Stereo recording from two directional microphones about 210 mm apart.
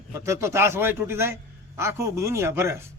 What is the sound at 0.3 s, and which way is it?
A man's voice, 10° right (ahead or behind).